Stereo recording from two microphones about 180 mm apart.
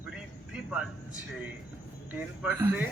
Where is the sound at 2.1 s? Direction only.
10° right (ahead or behind).